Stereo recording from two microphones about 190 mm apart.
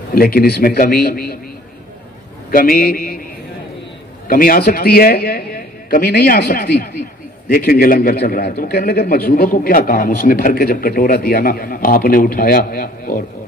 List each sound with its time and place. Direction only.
0.1 s a man's voice: 50° left (ahead or behind)
2.5 s a man's voice: 50° left (ahead or behind)
4.3 s a man's voice: 50° left (ahead or behind)